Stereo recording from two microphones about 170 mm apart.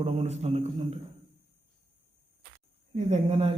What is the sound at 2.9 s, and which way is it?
Speech, 40° right (ahead or behind).